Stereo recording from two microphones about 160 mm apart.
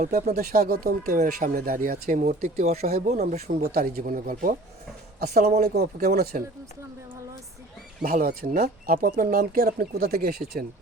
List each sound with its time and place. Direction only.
0.1 s speech: 60° right (ahead or behind); by 3.5 s 45° right (ahead or behind)
3.6 s speech: 65° right (ahead or behind)
5.2 s speech: 75° right (ahead or behind)
5.6 s speech: 85° right
8.0 s speech: 60° right (ahead or behind)